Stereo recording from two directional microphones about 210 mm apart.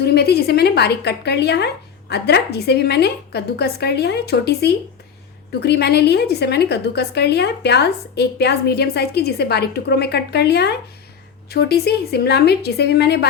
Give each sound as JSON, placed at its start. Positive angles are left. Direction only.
{"t": 0.0, "sound": "a woman's voice", "side_deg": 50}